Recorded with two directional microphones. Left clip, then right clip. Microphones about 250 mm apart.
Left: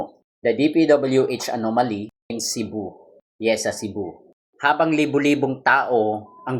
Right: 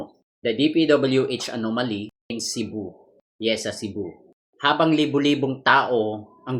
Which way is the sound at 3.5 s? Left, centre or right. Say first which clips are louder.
Left 4 dB; left.